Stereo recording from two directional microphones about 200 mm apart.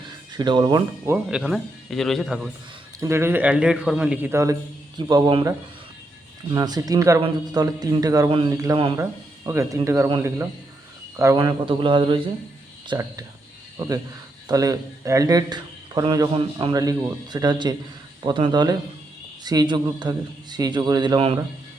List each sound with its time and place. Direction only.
0.3 s a man's voice: 20° right (ahead or behind)
1.4 s speech: centre (ahead or behind)
3.0 s a man's voice: 15° right (ahead or behind)
11.3 s a man's voice: 25° right (ahead or behind)